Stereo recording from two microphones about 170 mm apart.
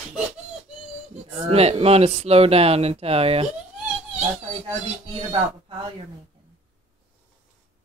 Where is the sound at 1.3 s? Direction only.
35° right (ahead or behind).